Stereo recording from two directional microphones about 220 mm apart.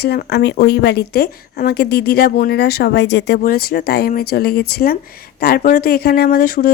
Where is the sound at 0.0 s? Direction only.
45° left (ahead or behind).